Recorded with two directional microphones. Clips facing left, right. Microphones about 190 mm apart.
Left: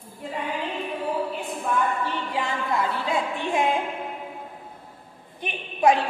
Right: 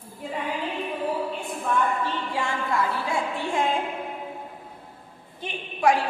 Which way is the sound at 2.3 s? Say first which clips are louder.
Left 1 dB; 20° left (ahead or behind).